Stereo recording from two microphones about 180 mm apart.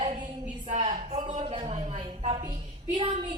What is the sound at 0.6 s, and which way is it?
A woman's voice, 40° right (ahead or behind).